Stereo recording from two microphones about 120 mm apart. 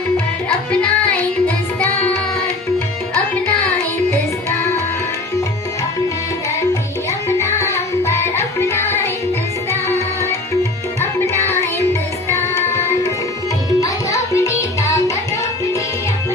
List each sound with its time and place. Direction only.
1.1 s music: 15° left (ahead or behind)
7.6 s music: 25° left (ahead or behind)
12.3 s tabla: 25° left (ahead or behind)
13.7 s music: 25° left (ahead or behind)